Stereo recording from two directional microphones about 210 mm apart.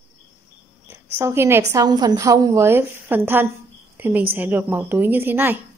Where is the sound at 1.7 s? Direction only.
20° right (ahead or behind).